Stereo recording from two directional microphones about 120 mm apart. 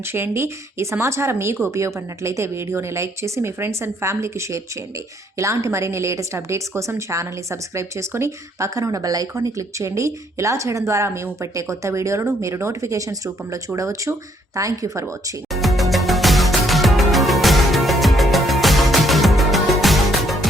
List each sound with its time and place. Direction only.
0.0 s a woman's voice: 20° right (ahead or behind)
15.5 s music: centre (ahead or behind)